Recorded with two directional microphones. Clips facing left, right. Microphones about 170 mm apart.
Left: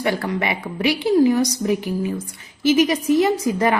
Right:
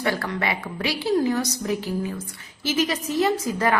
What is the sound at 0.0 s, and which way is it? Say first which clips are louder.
A woman's voice: left 3 dB; 15° left (ahead or behind).